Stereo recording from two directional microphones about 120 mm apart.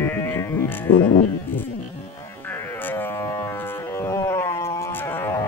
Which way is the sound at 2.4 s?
20° left (ahead or behind).